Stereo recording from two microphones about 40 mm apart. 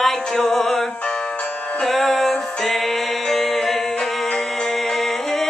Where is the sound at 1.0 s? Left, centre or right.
Left.